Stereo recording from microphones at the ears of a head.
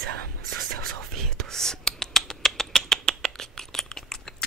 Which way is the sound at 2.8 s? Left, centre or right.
Right.